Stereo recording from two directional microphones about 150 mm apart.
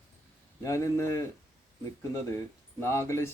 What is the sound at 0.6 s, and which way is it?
Speech, 20° left (ahead or behind).